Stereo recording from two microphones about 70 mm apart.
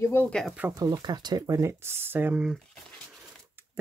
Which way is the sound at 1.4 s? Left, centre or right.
Right.